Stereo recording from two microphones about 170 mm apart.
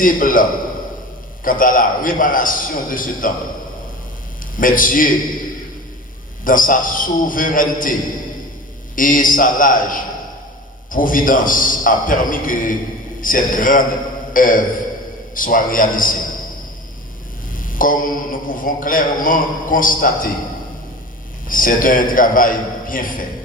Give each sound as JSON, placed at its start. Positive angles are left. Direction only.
{"t": 0.0, "sound": "a man's voice", "side_deg": 55}
{"t": 1.5, "sound": "a man's voice", "side_deg": 55}
{"t": 4.5, "sound": "a man's voice", "side_deg": 55}
{"t": 6.4, "sound": "a man's voice", "side_deg": 55}
{"t": 9.0, "sound": "a man's voice", "side_deg": 55}
{"t": 17.6, "sound": "a man's voice", "side_deg": 55}
{"t": 21.4, "sound": "a man's voice", "side_deg": 55}